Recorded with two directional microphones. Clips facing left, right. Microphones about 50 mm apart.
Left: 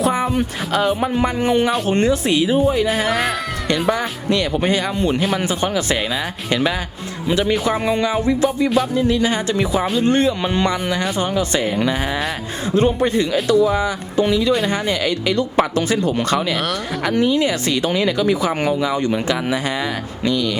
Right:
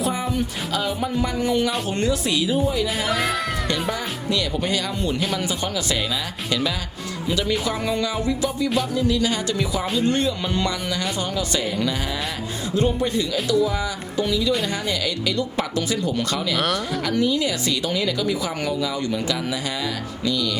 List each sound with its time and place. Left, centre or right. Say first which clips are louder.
0.0 s speech: left 6 dB; left
3.1 s speech: left 3 dB; centre
4.3 s speech: left 5 dB; left
12.7 s speech: left 5 dB; left
16.6 s speech: even; centre
17.0 s speech: left 6 dB; left